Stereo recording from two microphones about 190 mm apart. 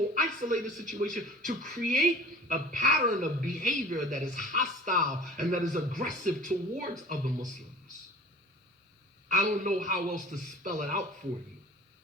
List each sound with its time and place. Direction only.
0.1 s a woman's voice: 45° right (ahead or behind)
9.3 s a woman's voice: 40° right (ahead or behind)